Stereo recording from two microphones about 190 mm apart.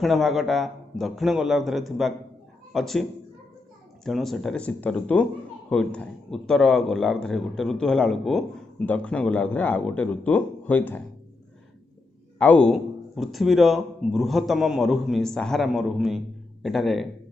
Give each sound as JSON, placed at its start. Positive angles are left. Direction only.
{"t": 0.0, "sound": "a man's voice", "side_deg": 0}
{"t": 12.4, "sound": "speech", "side_deg": 5}